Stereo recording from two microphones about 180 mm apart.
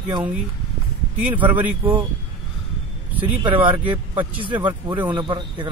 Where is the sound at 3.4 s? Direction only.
25° right (ahead or behind).